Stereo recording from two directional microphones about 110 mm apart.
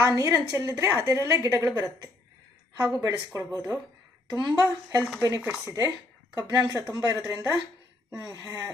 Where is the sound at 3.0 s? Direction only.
35° right (ahead or behind).